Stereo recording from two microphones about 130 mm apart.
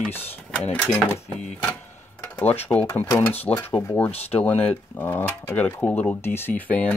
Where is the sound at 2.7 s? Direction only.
15° left (ahead or behind).